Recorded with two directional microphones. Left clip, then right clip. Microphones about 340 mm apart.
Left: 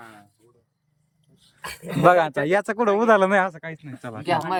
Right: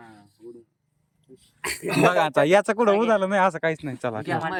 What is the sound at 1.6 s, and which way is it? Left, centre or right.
Speech, right.